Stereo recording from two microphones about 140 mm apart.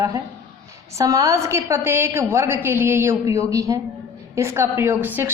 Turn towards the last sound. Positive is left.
turn(degrees=-15)  # may be behind; listen again after turning